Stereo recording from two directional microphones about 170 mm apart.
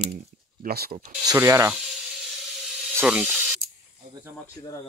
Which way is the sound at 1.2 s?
20° right (ahead or behind).